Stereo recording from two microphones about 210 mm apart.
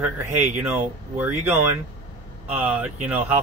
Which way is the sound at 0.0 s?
10° right (ahead or behind).